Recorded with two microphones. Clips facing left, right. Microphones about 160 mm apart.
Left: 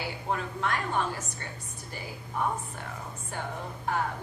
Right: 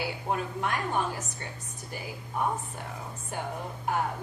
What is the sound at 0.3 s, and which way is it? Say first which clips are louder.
Speech: even; 15° right (ahead or behind).